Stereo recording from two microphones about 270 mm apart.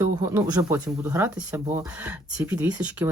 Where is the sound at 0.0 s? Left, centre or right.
Centre.